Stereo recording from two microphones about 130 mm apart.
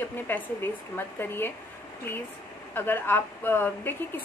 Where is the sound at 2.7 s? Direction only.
15° left (ahead or behind).